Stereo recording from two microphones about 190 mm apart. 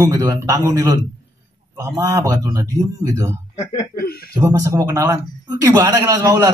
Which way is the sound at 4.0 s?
55° left (ahead or behind).